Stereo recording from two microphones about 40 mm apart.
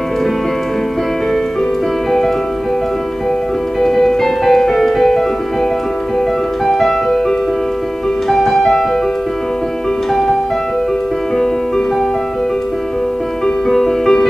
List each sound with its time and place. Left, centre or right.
3.8 s music: centre
6.6 s music: centre
13.7 s music: centre